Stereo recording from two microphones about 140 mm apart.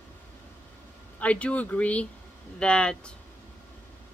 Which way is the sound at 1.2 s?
10° left (ahead or behind).